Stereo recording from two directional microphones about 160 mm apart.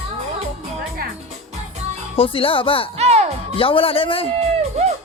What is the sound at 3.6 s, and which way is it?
Speech, 35° left (ahead or behind).